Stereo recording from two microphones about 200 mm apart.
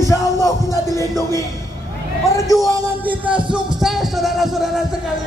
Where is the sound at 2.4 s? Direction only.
15° left (ahead or behind).